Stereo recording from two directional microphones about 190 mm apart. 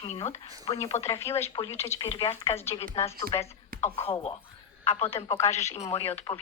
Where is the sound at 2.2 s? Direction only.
30° left (ahead or behind).